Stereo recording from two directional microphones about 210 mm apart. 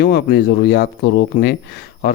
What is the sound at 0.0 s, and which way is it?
Speech, 50° left (ahead or behind).